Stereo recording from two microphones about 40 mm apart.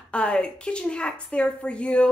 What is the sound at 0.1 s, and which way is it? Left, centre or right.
A woman's voice, left.